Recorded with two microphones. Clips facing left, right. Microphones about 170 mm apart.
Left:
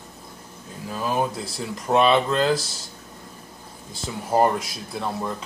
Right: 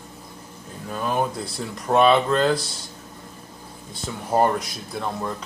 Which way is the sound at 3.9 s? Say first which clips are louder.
Even; centre (ahead or behind).